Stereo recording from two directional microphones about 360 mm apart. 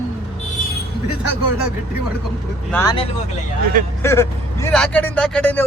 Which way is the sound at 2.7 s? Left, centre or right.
Centre.